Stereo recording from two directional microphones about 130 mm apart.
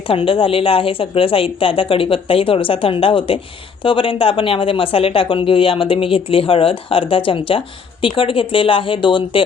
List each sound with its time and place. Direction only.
0.1 s speech: 45° left (ahead or behind)